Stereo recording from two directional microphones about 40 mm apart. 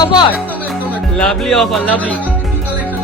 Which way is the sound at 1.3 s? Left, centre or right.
Centre.